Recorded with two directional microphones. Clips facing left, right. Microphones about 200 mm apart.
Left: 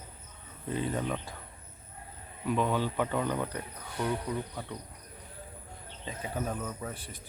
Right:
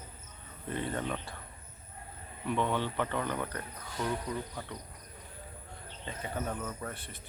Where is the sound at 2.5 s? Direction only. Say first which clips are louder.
Left 2 dB; 10° left (ahead or behind).